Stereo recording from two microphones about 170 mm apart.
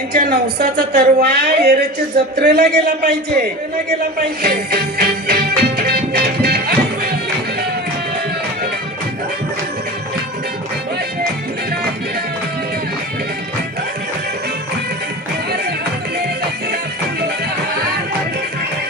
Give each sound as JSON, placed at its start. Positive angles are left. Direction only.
{"t": 0.1, "sound": "a woman's voice", "side_deg": -65}
{"t": 4.7, "sound": "music", "side_deg": -65}